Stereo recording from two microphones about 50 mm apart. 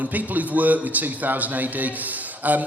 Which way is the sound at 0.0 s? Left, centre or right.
Right.